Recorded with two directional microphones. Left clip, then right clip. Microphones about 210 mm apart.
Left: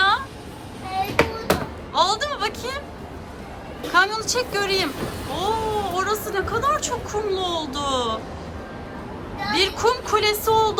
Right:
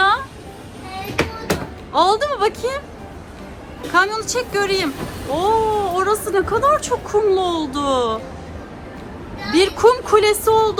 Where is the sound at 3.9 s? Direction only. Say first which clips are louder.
Right 2 dB; 15° left (ahead or behind).